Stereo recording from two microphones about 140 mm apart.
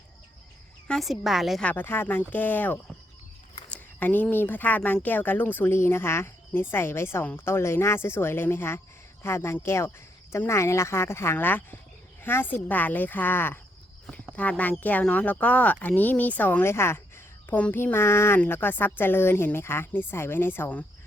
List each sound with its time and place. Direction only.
0.9 s a woman's voice: centre (ahead or behind)
1.6 s speech: 15° left (ahead or behind)